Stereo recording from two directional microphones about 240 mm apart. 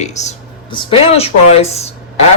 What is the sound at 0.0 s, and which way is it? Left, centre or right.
Speech, left.